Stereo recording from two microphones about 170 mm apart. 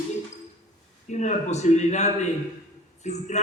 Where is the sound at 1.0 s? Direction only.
45° left (ahead or behind).